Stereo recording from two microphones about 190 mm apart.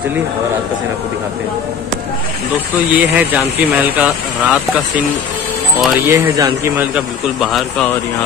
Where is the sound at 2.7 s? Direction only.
10° right (ahead or behind).